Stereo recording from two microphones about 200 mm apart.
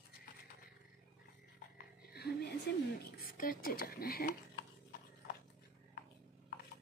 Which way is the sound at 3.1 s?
45° left (ahead or behind).